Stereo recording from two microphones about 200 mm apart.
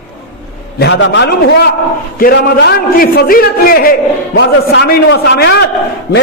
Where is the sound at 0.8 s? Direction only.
65° left (ahead or behind).